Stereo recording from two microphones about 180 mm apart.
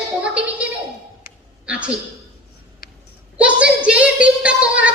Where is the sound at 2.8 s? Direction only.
55° left (ahead or behind).